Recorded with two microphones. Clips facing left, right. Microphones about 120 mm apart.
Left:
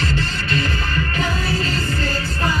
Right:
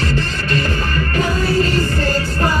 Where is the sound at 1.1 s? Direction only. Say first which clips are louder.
Right 9 dB; 50° right (ahead or behind).